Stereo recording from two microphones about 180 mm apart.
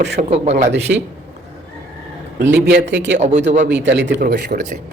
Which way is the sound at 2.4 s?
70° right (ahead or behind).